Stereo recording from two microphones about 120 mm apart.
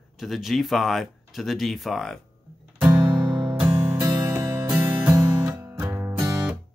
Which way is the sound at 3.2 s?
40° right (ahead or behind).